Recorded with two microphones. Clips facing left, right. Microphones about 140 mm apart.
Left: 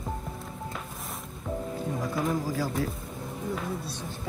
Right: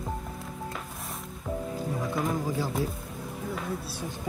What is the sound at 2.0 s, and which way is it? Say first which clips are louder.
Music: left 1 dB; centre (ahead or behind).